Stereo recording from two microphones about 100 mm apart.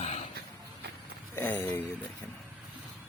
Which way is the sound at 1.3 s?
20° left (ahead or behind).